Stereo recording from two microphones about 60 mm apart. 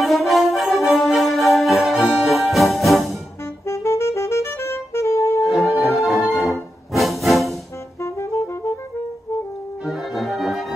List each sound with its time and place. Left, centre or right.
0.0 s music: centre
3.6 s music: left
5.4 s music: centre
8.0 s saxophone: left
9.8 s brass instrument: centre